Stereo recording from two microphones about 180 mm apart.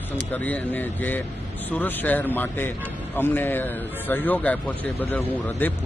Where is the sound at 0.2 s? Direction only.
10° left (ahead or behind).